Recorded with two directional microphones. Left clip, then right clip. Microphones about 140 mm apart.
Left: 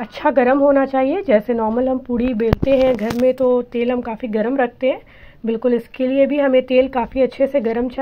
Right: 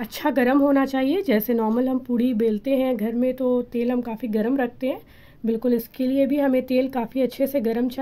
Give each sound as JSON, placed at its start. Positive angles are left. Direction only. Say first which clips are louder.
{"t": 0.2, "sound": "speech", "louder": "left 6 dB", "side_deg": -50}
{"t": 2.6, "sound": "speech", "louder": "left 8 dB", "side_deg": -30}
{"t": 3.3, "sound": "speech", "louder": "left 7 dB", "side_deg": 5}
{"t": 3.7, "sound": "speech", "louder": "left 5 dB", "side_deg": -35}